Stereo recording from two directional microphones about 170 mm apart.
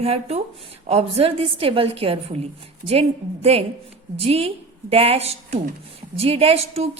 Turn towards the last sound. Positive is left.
turn(degrees=-35)  # may be behind; listen again after turning